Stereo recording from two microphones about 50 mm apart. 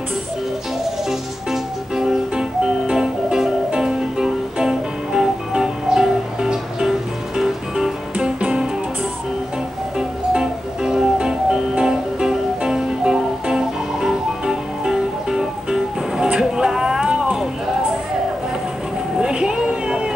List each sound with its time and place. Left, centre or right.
1.5 s music: centre
8.4 s music: right
9.9 s music: centre
19.1 s a sound: centre